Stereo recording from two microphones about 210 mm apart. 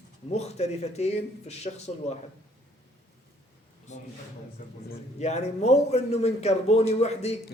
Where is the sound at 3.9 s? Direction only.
35° left (ahead or behind).